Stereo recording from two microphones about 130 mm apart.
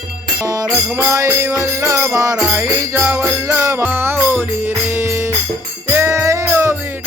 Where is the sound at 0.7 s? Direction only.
15° right (ahead or behind).